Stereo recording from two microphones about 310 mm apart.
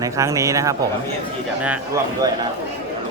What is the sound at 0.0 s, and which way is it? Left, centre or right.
Speech, centre.